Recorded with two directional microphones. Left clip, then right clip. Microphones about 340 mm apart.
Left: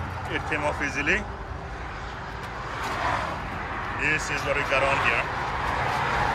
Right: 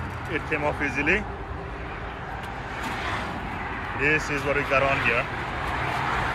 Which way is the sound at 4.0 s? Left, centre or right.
Centre.